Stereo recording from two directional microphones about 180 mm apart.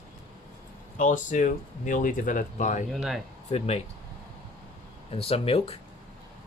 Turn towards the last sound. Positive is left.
turn(degrees=35)  # may be behind; listen again after turning